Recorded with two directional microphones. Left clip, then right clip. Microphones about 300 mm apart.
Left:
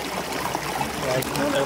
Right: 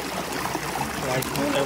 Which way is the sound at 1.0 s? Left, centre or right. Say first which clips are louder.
Left 2 dB; centre.